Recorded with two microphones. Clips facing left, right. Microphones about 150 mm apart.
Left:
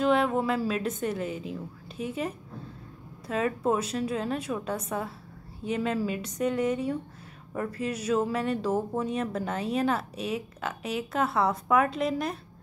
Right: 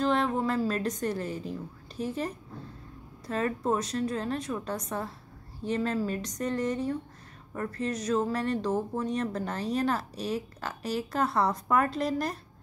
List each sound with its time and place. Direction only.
0.0 s speech: 5° left (ahead or behind)
3.3 s a woman's voice: 5° left (ahead or behind)